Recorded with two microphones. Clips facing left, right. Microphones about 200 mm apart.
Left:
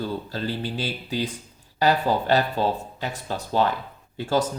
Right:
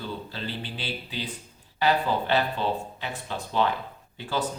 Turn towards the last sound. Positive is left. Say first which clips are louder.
# left 6 dB
turn(degrees=40)  # may be behind; listen again after turning